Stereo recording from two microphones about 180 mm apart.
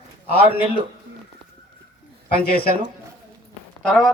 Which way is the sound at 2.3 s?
60° left (ahead or behind).